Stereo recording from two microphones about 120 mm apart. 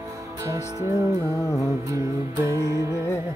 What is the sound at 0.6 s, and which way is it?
Music, 25° left (ahead or behind).